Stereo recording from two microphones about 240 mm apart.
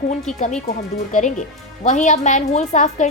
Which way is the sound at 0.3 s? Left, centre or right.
Left.